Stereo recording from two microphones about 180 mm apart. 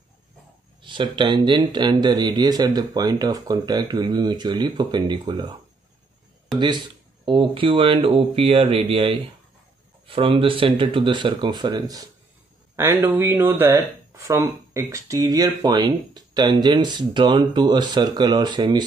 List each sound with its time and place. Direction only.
0.8 s speech: 25° right (ahead or behind)
7.2 s speech: 30° right (ahead or behind)